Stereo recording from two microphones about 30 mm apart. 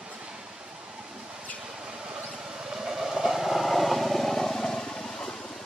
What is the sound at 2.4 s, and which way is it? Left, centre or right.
Train, centre.